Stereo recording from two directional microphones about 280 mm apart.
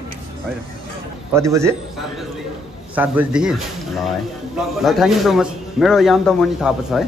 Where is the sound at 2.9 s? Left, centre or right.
Centre.